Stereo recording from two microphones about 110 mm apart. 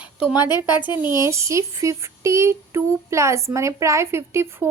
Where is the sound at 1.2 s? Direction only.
25° right (ahead or behind).